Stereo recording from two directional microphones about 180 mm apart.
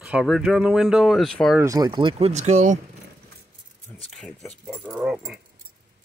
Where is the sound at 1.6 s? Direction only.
20° right (ahead or behind); by 2.8 s 40° right (ahead or behind).